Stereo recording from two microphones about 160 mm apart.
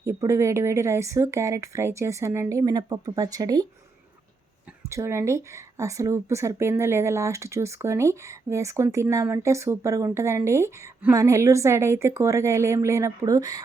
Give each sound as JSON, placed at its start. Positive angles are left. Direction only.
{"t": 0.0, "sound": "speech", "side_deg": -15}
{"t": 4.8, "sound": "speech", "side_deg": -20}